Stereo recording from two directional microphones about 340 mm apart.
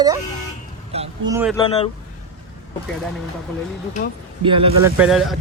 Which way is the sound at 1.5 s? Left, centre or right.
Centre.